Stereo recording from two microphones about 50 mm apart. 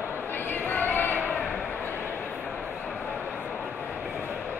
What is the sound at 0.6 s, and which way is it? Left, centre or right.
Music, left.